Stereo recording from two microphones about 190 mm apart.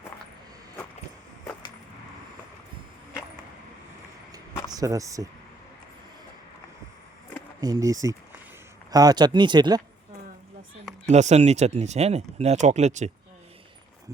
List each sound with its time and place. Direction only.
4.7 s speech: 20° right (ahead or behind)
7.6 s speech: 20° right (ahead or behind)
11.1 s speech: 35° right (ahead or behind)